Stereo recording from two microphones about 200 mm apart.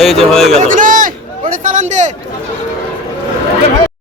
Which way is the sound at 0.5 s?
40° right (ahead or behind).